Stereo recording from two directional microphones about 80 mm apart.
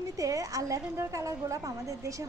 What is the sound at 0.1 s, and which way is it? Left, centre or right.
Female singing, right.